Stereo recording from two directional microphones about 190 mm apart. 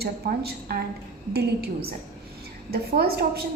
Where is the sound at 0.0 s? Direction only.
55° right (ahead or behind).